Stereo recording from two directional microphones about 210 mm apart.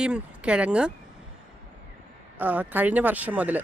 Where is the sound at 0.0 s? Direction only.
5° right (ahead or behind).